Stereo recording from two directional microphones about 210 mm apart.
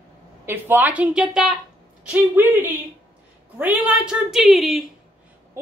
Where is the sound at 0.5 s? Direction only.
10° right (ahead or behind).